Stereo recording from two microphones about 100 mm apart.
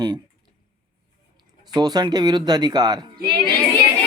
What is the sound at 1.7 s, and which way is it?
Speech, 45° right (ahead or behind).